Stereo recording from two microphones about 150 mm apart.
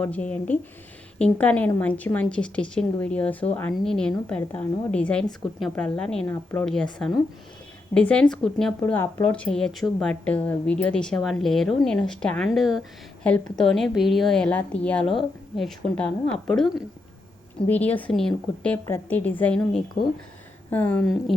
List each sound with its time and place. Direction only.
0.0 s a woman's voice: 10° left (ahead or behind)
6.3 s a woman's voice: 15° left (ahead or behind)
6.7 s a woman's voice: 5° left (ahead or behind)
8.8 s a woman's voice: 15° left (ahead or behind)
21.0 s a woman's voice: centre (ahead or behind)